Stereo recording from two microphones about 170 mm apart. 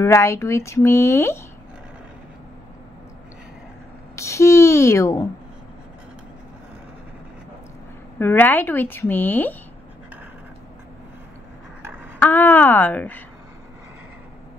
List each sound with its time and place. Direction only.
0.0 s speech: 15° left (ahead or behind)
4.1 s speech: 15° left (ahead or behind)
8.2 s speech: 10° left (ahead or behind)
12.2 s speech: 10° left (ahead or behind)